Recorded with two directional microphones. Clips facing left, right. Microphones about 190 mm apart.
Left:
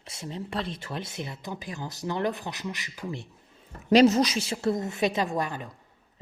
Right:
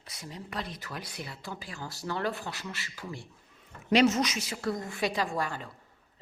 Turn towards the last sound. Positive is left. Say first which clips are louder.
# left 3 dB
turn(degrees=20)  # may be behind; listen again after turning